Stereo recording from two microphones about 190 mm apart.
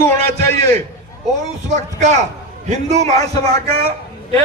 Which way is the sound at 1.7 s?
35° right (ahead or behind).